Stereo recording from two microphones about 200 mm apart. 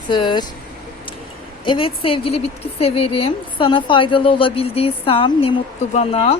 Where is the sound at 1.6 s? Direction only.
25° left (ahead or behind).